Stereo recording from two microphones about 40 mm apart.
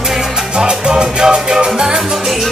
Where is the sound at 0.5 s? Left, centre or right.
Right.